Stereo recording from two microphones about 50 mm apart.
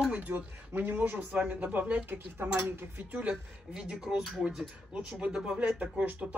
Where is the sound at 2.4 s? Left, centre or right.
Right.